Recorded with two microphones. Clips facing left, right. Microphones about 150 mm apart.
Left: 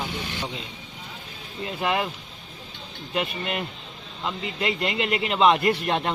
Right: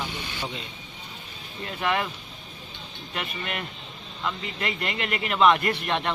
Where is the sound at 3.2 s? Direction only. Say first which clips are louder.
Left 5 dB; 25° left (ahead or behind).